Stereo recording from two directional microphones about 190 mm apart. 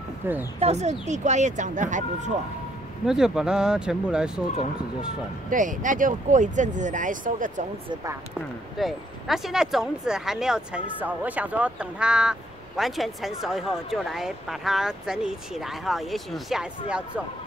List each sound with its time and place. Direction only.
0.2 s speech: 10° right (ahead or behind)
0.6 s speech: 35° right (ahead or behind)
3.1 s speech: centre (ahead or behind)
5.5 s speech: 45° right (ahead or behind)
7.9 s speech: 15° right (ahead or behind)
8.4 s speech: centre (ahead or behind)